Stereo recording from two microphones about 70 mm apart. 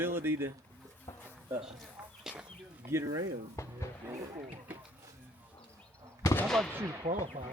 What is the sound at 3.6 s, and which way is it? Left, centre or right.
Music, left.